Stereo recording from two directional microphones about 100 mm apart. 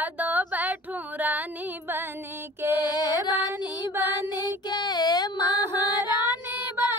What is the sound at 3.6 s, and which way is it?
Mantra, 25° right (ahead or behind).